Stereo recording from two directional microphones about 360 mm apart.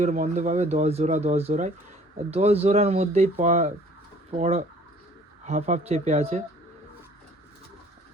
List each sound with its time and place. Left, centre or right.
0.0 s speech: centre